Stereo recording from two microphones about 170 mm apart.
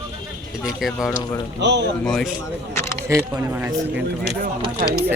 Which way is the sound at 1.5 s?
90° right.